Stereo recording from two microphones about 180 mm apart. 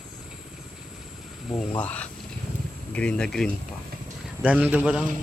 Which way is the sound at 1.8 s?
10° left (ahead or behind).